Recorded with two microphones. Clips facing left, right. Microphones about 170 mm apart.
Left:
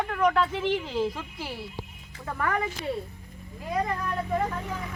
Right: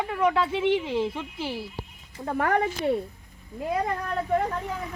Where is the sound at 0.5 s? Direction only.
20° right (ahead or behind).